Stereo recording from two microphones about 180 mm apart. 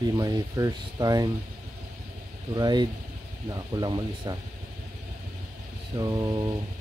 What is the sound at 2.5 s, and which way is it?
Speech, 25° right (ahead or behind).